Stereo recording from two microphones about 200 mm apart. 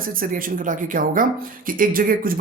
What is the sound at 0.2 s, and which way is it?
Speech, 45° right (ahead or behind).